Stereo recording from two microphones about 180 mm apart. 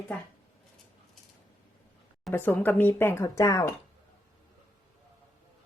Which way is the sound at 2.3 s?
10° left (ahead or behind).